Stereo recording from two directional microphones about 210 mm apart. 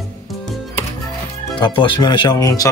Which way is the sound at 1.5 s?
25° left (ahead or behind).